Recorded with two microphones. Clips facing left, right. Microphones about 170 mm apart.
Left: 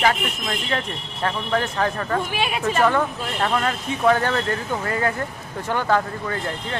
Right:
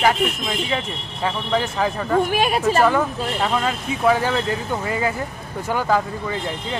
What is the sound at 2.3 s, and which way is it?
Speech, 40° right (ahead or behind).